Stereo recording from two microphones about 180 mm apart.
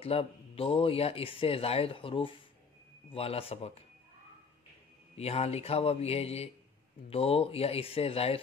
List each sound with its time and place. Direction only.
0.0 s speech: 35° left (ahead or behind)
5.1 s speech: 35° left (ahead or behind)